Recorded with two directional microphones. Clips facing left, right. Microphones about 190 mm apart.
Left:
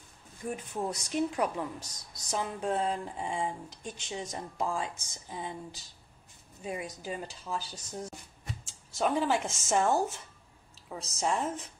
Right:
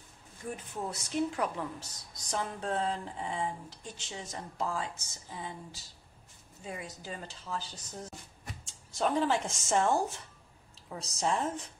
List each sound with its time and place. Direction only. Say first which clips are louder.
0.7 s a woman's voice: left 1 dB; 15° left (ahead or behind)